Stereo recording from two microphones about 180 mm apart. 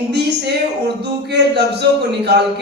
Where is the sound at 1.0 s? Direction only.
65° right (ahead or behind).